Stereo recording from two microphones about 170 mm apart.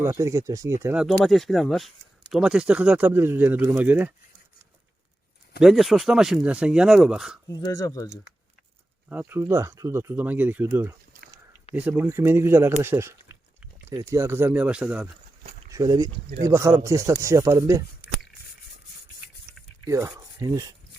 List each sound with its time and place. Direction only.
0.0 s speech: 15° right (ahead or behind)
0.9 s speech: centre (ahead or behind)
5.5 s speech: centre (ahead or behind)
7.4 s speech: 20° left (ahead or behind)
9.0 s speech: 10° right (ahead or behind)
15.7 s speech: 20° right (ahead or behind)
20.1 s speech: 20° right (ahead or behind)